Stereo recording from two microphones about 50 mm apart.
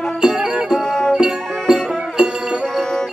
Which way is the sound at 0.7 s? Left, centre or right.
Centre.